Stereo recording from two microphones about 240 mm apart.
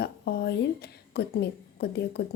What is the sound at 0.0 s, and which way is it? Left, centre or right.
A woman's voice, left.